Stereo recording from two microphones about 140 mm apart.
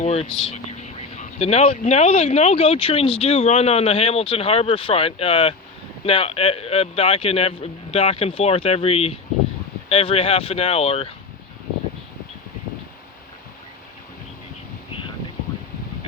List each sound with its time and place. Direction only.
0.0 s speech: 50° left (ahead or behind)
0.3 s speech: 5° left (ahead or behind)
0.5 s speech: 55° left (ahead or behind)